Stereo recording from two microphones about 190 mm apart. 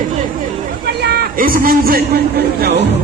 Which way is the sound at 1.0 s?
50° right (ahead or behind).